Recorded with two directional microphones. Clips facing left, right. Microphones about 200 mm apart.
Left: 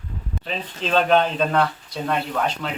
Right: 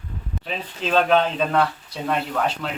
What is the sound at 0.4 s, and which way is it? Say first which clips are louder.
Speech: even; 5° right (ahead or behind).